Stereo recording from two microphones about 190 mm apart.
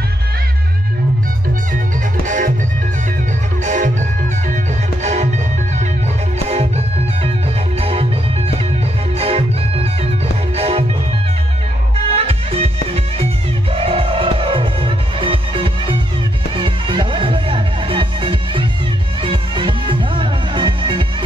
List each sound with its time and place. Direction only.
2.2 s music: 40° right (ahead or behind)
3.6 s music: 40° right (ahead or behind)
5.0 s music: 35° right (ahead or behind)
7.8 s music: 30° right (ahead or behind)
9.2 s music: 30° right (ahead or behind)
12.2 s music: 30° right (ahead or behind)
13.7 s music: 30° right (ahead or behind)